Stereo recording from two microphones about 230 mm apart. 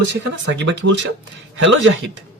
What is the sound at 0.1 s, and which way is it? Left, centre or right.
Speech, right.